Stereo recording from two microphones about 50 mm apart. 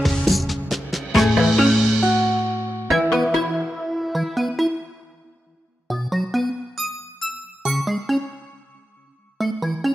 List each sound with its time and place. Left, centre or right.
0.1 s music: centre
2.5 s music: right
3.1 s music: centre
5.9 s music: centre
9.4 s music: centre